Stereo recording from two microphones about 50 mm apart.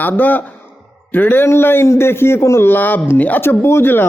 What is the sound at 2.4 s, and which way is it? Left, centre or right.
Speech, left.